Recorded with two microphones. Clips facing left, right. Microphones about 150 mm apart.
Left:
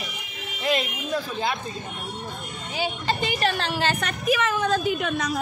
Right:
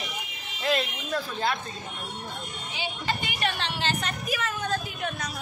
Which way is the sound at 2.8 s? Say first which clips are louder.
Left 6 dB; 35° left (ahead or behind).